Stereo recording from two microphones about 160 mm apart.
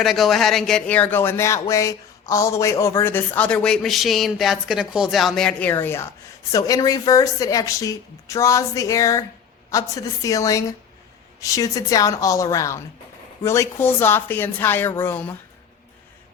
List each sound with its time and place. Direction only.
0.0 s a woman's voice: centre (ahead or behind)